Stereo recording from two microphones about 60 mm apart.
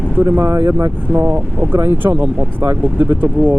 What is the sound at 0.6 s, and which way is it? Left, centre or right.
Speech, right.